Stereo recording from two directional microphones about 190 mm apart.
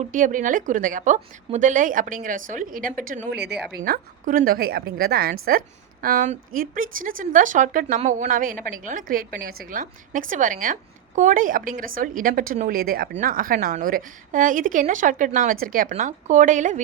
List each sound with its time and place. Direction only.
0.0 s a woman's voice: 45° right (ahead or behind)